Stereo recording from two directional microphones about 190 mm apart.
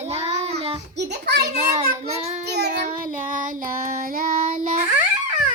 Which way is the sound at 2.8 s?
45° right (ahead or behind).